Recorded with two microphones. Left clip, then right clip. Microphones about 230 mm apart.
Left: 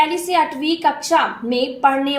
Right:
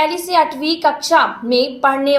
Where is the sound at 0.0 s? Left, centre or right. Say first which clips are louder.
Right 2 dB; right.